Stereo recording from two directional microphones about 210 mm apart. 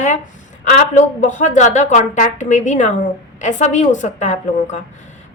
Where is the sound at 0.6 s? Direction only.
35° left (ahead or behind).